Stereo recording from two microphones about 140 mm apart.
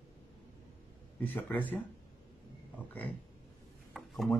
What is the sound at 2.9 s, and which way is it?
Speech, 10° left (ahead or behind).